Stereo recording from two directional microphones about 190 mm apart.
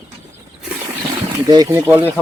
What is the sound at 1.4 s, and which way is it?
Speech, 20° right (ahead or behind).